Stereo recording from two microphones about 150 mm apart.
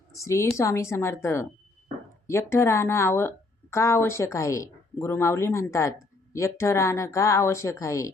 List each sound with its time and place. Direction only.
0.1 s a woman's voice: 20° left (ahead or behind)